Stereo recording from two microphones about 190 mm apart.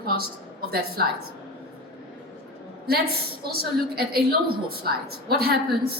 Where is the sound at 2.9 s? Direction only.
55° right (ahead or behind).